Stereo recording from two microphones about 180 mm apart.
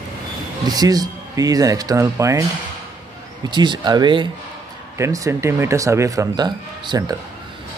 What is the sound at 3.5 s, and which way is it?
Speech, 25° right (ahead or behind).